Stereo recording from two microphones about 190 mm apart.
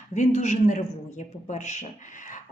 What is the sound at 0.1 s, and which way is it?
A man's voice, 40° left (ahead or behind).